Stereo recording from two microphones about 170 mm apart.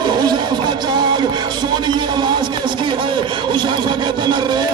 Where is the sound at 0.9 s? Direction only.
25° right (ahead or behind).